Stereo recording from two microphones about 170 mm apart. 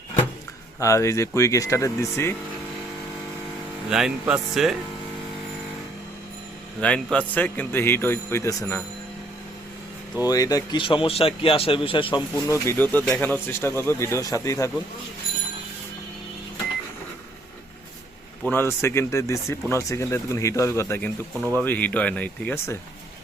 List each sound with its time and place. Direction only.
0.8 s speech: 15° left (ahead or behind)
3.8 s speech: 5° right (ahead or behind)
6.7 s speech: 5° left (ahead or behind)
10.2 s speech: 20° left (ahead or behind)
12.5 s speech: 15° left (ahead or behind)
18.4 s speech: 15° left (ahead or behind)